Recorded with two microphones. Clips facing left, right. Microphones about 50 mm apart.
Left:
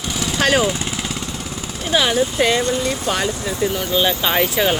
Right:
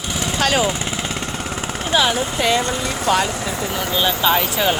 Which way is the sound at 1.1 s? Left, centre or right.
Right.